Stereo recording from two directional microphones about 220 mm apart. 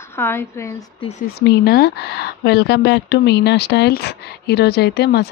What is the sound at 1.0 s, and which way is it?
Speech, 30° left (ahead or behind).